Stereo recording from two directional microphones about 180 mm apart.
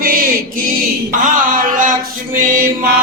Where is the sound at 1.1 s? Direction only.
50° right (ahead or behind).